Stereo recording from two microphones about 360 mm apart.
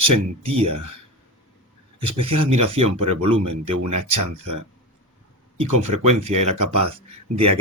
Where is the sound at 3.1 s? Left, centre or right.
Centre.